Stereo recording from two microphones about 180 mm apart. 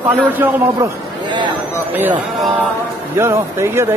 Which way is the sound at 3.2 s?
15° right (ahead or behind).